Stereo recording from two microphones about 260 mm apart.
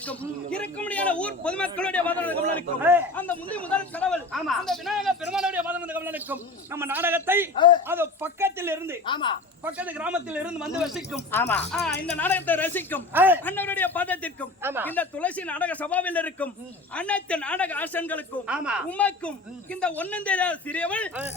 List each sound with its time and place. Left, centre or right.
0.8 s a man's voice: centre
7.5 s speech: centre
7.9 s speech: centre
9.0 s speech: centre
9.6 s a man's voice: centre
13.1 s speech: centre
13.4 s speech: centre
14.6 s speech: centre
14.8 s a man's voice: centre
18.4 s a man's voice: centre